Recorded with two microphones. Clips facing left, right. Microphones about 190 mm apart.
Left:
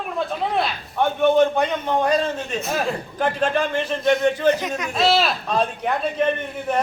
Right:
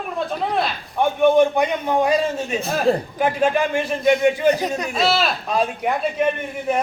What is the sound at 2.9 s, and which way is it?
Speech, 35° right (ahead or behind).